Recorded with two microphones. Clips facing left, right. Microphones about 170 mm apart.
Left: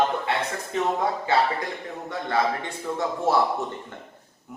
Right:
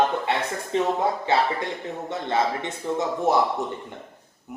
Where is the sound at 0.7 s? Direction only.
30° right (ahead or behind).